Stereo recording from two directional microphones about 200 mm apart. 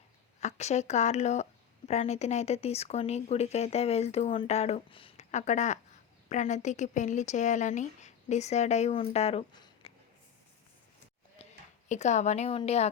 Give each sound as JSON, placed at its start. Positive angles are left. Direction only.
{"t": 0.3, "sound": "speech", "side_deg": 35}
{"t": 11.4, "sound": "a sound", "side_deg": 30}
{"t": 11.9, "sound": "speech", "side_deg": 35}